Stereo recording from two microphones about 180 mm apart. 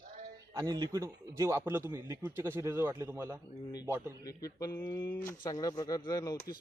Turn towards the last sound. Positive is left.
turn(degrees=20)  # may be behind; listen again after turning